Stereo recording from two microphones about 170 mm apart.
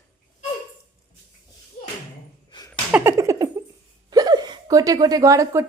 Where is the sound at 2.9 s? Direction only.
10° right (ahead or behind).